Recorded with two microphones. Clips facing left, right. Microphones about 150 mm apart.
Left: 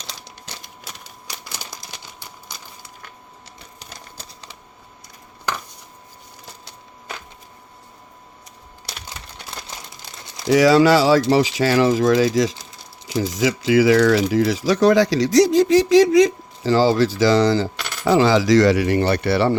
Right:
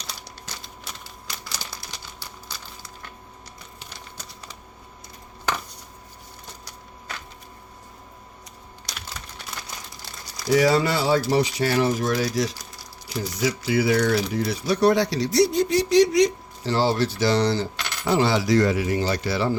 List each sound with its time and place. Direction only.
9.6 s crumpling: 20° left (ahead or behind)
10.5 s coin: 90° left
12.5 s a sound: 25° left (ahead or behind)
13.1 s coin: 90° left; by 19.5 s 65° left (ahead or behind)